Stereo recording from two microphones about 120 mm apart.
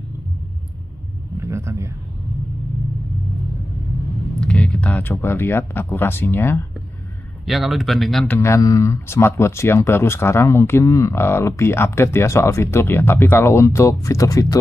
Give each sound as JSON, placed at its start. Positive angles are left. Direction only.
{"t": 1.4, "sound": "a sound", "side_deg": -25}
{"t": 4.4, "sound": "speech", "side_deg": 10}
{"t": 7.4, "sound": "speech", "side_deg": 0}
{"t": 8.3, "sound": "speech", "side_deg": 25}